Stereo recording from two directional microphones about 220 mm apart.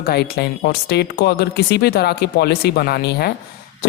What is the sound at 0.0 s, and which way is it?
A woman's voice, 45° left (ahead or behind).